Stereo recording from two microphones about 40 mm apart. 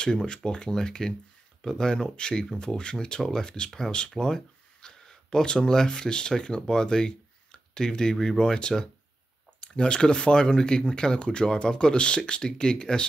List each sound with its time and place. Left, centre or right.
0.0 s speech: centre
3.2 s speech: centre
3.4 s speech: left